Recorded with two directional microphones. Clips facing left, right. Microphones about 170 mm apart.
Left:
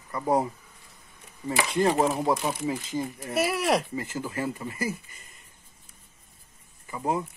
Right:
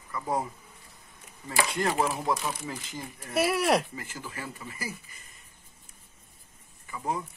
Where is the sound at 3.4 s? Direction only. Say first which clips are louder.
Even; centre (ahead or behind).